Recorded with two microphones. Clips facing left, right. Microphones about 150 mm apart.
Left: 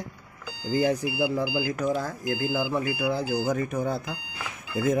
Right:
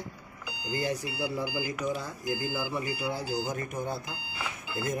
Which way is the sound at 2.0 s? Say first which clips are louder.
Left 4 dB; 90° left.